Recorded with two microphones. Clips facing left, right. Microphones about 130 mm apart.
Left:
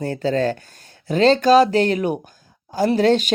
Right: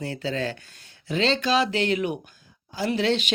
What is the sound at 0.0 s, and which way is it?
Speech, 45° left (ahead or behind).